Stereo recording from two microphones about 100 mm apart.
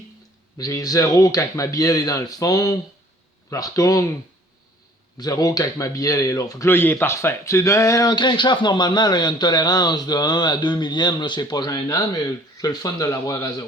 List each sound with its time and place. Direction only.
0.6 s speech: 35° left (ahead or behind)
5.1 s speech: 40° left (ahead or behind)
6.7 s speech: 20° left (ahead or behind)
8.1 s a man's voice: 50° left (ahead or behind); by 13.7 s 35° left (ahead or behind)